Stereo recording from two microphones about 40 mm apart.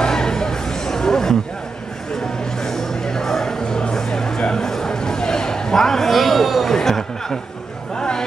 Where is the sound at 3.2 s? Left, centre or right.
Centre.